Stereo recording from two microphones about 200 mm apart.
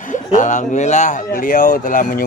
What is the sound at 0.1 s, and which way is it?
Speech, 40° left (ahead or behind).